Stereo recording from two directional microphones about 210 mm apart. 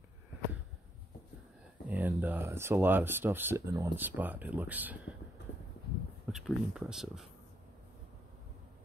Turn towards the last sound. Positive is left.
turn(degrees=0)  # may be behind; listen again after turning